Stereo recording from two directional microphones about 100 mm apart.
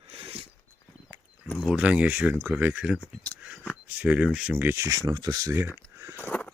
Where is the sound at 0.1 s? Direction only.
65° right (ahead or behind).